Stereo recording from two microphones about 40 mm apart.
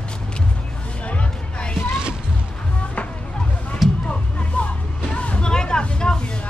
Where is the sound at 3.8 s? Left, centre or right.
Centre.